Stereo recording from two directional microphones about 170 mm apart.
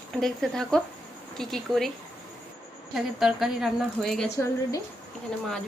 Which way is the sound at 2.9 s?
Centre (ahead or behind).